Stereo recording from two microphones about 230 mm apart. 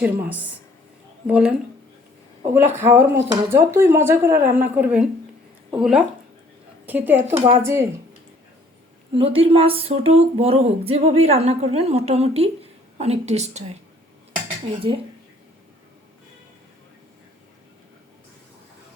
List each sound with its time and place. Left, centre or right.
0.0 s speech: centre
2.7 s speech: centre
9.1 s speech: right